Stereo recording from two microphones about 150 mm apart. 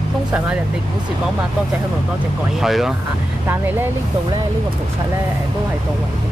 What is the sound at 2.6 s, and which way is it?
Speech, centre (ahead or behind).